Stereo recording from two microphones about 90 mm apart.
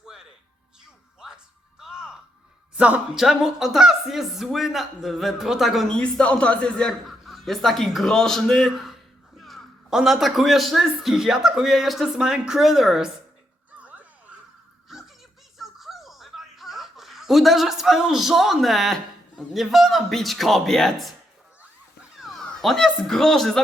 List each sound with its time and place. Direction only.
0.0 s music: 5° right (ahead or behind)
1.8 s music: 5° right (ahead or behind)
2.7 s speech: 15° right (ahead or behind)
3.2 s speech: 5° right (ahead or behind)
7.1 s speech: centre (ahead or behind)
13.7 s a sound: 15° right (ahead or behind)
14.8 s a sound: 5° right (ahead or behind)
15.5 s music: centre (ahead or behind)
19.4 s speech: centre (ahead or behind)
22.2 s speech: centre (ahead or behind)